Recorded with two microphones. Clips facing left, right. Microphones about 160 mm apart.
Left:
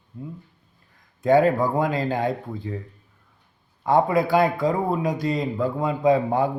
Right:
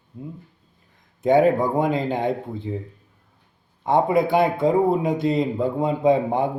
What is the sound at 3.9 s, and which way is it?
A man's voice, 20° right (ahead or behind).